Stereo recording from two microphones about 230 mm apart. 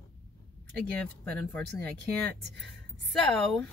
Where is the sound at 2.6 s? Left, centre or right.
Centre.